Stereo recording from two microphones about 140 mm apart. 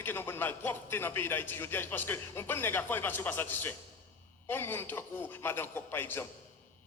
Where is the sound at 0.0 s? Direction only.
15° left (ahead or behind).